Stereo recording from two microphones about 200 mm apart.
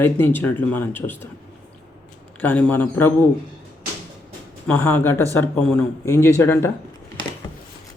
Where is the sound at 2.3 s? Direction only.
10° left (ahead or behind).